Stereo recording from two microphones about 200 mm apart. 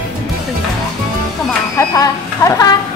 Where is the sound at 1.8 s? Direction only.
15° left (ahead or behind).